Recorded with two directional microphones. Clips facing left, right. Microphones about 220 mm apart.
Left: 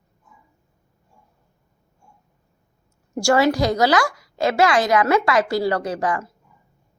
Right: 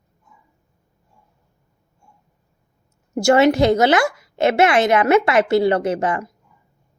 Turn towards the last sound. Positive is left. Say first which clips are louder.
# right 3 dB
turn(degrees=-25)  # may be behind; listen again after turning